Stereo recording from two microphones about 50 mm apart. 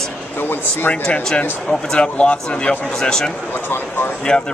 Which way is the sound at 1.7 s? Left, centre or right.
Centre.